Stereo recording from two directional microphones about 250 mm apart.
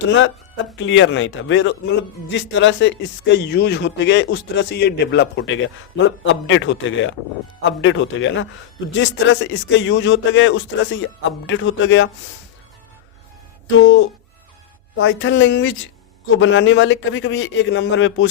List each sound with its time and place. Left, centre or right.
0.1 s a man's voice: left
13.7 s a man's voice: left